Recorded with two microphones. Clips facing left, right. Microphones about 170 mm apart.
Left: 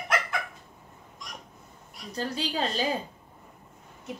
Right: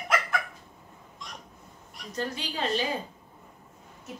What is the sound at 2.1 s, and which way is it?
Speech, 35° left (ahead or behind).